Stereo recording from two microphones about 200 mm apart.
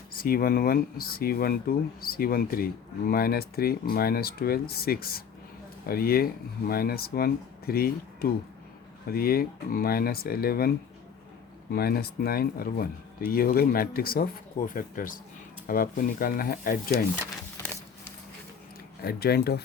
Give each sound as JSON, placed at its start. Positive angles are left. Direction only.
{"t": 0.2, "sound": "speech", "side_deg": 50}
{"t": 11.7, "sound": "speech", "side_deg": 50}
{"t": 19.0, "sound": "speech", "side_deg": 50}